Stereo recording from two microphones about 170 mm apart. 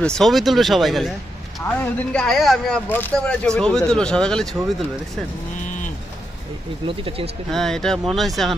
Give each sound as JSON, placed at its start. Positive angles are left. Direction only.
{"t": 0.0, "sound": "speech", "side_deg": 5}
{"t": 6.9, "sound": "speech", "side_deg": -35}
{"t": 7.5, "sound": "speech", "side_deg": 5}